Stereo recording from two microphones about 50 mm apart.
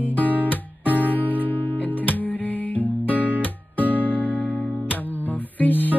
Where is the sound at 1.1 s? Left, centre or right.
Left.